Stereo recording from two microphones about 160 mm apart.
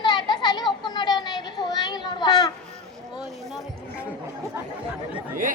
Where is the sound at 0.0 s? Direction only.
25° left (ahead or behind).